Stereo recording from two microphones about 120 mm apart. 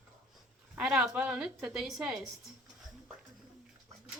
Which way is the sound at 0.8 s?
5° right (ahead or behind).